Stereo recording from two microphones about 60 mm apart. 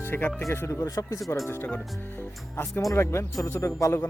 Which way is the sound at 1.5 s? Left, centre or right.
Left.